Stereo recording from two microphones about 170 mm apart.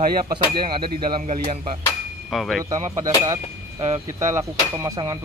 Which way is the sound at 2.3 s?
Centre (ahead or behind).